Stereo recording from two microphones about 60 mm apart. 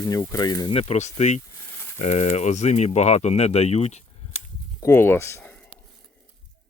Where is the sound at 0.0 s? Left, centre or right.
Left.